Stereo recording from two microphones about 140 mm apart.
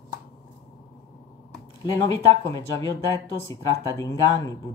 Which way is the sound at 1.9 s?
25° left (ahead or behind).